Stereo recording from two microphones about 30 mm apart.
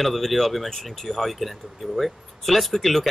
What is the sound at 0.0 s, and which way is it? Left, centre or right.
Speech, centre.